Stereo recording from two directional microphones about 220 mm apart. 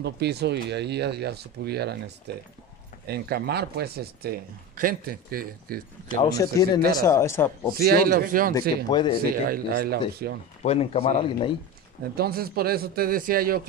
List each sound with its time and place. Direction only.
0.0 s speech: 50° right (ahead or behind)
6.2 s speech: 15° left (ahead or behind)
7.8 s speech: 45° right (ahead or behind)
8.5 s speech: 20° left (ahead or behind)
9.2 s speech: 40° right (ahead or behind)
10.6 s speech: 30° left (ahead or behind)
12.2 s speech: 45° right (ahead or behind)